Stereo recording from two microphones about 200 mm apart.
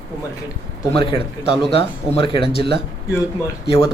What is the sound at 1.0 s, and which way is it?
Speech, 25° left (ahead or behind).